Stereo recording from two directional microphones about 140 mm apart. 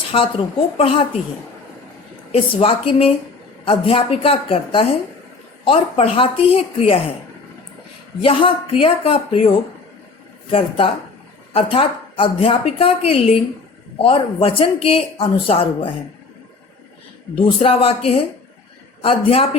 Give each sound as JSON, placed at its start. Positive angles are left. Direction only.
{"t": 0.1, "sound": "a woman's voice", "side_deg": 40}
{"t": 2.3, "sound": "a woman's voice", "side_deg": 40}
{"t": 8.2, "sound": "a woman's voice", "side_deg": 40}
{"t": 10.5, "sound": "a woman's voice", "side_deg": 40}
{"t": 17.3, "sound": "speech", "side_deg": 40}